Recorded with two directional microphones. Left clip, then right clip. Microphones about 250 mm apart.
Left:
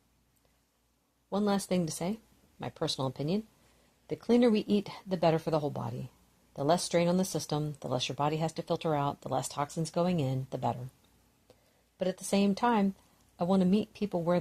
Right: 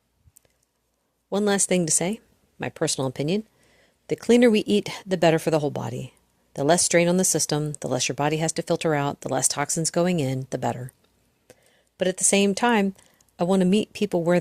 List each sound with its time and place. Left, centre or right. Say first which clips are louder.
1.3 s speech: right 9 dB; right
11.5 s a sound: right 9 dB; right
11.9 s speech: right 9 dB; right